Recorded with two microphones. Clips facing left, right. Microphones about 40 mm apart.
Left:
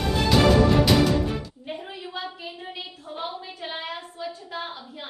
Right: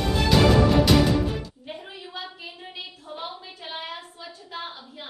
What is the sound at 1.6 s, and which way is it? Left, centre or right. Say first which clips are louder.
A woman's voice: left 3 dB; centre.